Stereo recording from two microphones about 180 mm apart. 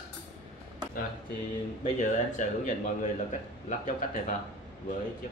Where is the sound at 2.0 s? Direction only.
45° left (ahead or behind).